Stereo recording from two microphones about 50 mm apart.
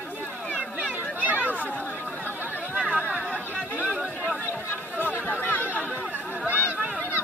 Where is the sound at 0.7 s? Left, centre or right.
Right.